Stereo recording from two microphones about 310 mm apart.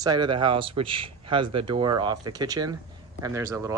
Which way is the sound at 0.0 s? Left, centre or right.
Centre.